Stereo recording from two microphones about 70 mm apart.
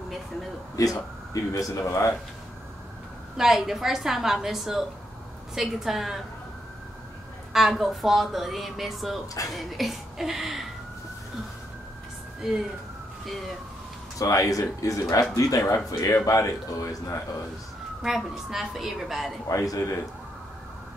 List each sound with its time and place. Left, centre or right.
0.7 s speech: left
3.3 s a woman's voice: centre
7.5 s a woman's voice: centre
12.4 s speech: centre
14.1 s speech: left
18.0 s a woman's voice: centre
19.5 s speech: left